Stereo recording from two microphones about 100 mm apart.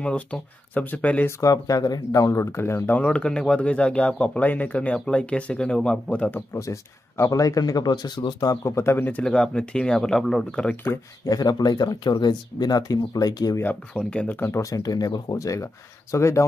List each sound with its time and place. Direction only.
0.0 s speech: 10° left (ahead or behind)
1.4 s speech: 35° left (ahead or behind); by 6.4 s 10° left (ahead or behind)
6.5 s speech: 30° left (ahead or behind)
9.2 s speech: 10° left (ahead or behind)
11.2 s speech: 40° left (ahead or behind)
13.6 s speech: 15° left (ahead or behind)